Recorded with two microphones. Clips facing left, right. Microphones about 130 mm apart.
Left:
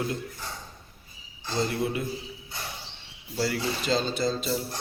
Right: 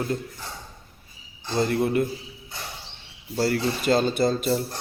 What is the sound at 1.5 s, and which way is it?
Speech, 50° right (ahead or behind).